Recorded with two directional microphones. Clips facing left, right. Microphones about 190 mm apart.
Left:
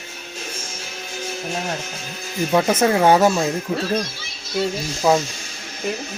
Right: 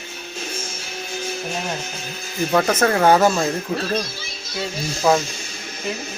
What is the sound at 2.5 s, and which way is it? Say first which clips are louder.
Speech: left 1 dB; 10° left (ahead or behind).